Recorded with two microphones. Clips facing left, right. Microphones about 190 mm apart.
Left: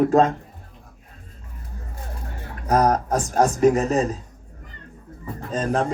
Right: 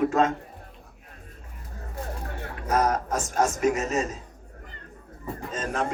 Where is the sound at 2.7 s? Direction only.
35° left (ahead or behind).